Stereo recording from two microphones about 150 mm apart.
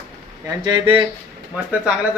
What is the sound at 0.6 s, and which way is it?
Speech, 30° right (ahead or behind).